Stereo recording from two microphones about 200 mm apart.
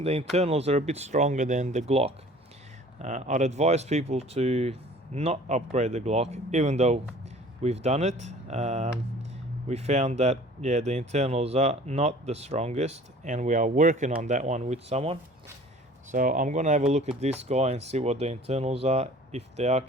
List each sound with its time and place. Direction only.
0.0 s speech: 30° right (ahead or behind)
16.1 s speech: 40° right (ahead or behind)